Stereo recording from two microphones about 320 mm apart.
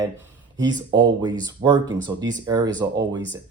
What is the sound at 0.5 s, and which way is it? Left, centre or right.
Speech, centre.